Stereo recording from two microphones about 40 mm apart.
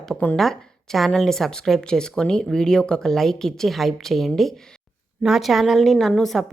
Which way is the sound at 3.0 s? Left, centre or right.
Centre.